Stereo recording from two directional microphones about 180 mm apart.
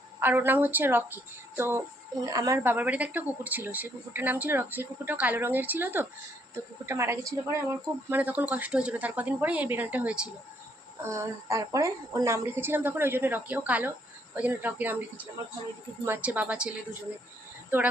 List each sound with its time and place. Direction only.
0.2 s speech: 10° right (ahead or behind)